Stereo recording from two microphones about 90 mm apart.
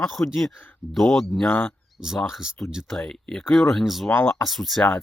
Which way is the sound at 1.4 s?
20° left (ahead or behind).